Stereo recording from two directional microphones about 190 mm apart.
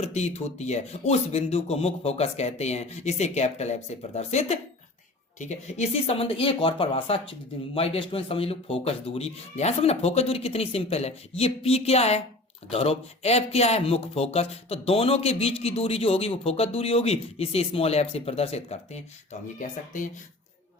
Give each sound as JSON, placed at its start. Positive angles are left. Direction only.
{"t": 0.0, "sound": "speech", "side_deg": 35}